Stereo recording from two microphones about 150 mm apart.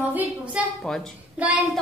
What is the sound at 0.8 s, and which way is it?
Speech, 5° left (ahead or behind).